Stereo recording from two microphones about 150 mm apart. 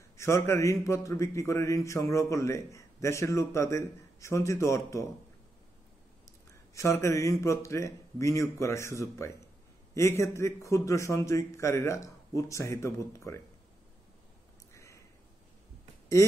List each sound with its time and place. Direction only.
0.2 s a man's voice: 20° left (ahead or behind)
6.2 s a man's voice: 20° left (ahead or behind)
14.7 s a sound: 20° left (ahead or behind)